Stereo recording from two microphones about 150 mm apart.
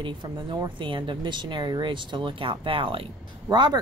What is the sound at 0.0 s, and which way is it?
Speech, 30° right (ahead or behind).